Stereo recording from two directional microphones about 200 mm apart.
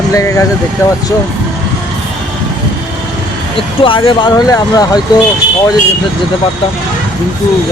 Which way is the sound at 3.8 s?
25° left (ahead or behind).